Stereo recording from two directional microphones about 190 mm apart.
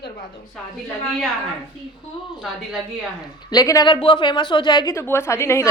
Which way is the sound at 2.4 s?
Centre (ahead or behind).